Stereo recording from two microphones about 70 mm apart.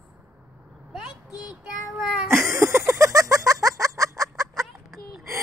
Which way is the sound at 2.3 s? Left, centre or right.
Right.